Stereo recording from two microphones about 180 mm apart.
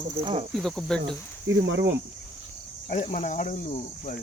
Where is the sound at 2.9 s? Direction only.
40° left (ahead or behind).